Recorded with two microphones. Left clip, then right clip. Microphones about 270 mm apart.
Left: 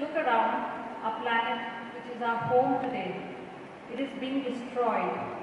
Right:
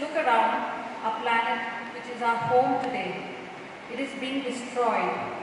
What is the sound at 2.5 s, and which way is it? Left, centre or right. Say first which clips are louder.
Speech: right 1 dB; left.